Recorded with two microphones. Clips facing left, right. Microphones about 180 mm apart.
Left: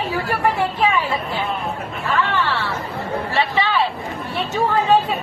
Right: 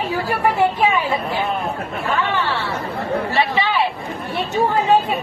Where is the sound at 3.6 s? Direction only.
15° right (ahead or behind).